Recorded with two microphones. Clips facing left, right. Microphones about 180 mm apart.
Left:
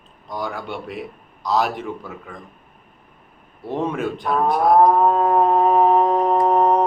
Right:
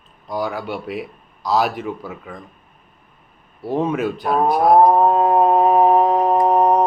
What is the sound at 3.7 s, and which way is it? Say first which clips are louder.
Speech: right 3 dB; 5° right (ahead or behind).